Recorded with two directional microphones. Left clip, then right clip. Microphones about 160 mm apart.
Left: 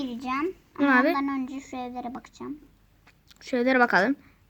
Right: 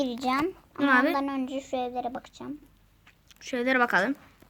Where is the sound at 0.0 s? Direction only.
75° right (ahead or behind).